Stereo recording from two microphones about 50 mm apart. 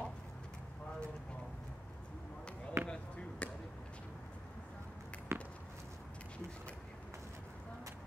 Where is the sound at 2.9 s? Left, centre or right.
Left.